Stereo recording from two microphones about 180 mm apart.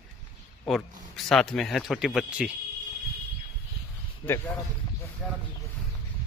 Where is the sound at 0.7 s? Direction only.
Centre (ahead or behind).